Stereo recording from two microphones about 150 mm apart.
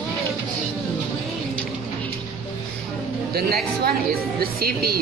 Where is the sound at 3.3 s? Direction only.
90° right.